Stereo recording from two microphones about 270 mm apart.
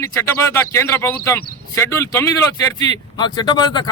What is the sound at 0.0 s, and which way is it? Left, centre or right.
A man's voice, centre.